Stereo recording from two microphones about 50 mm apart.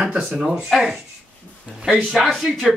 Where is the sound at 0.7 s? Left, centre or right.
Centre.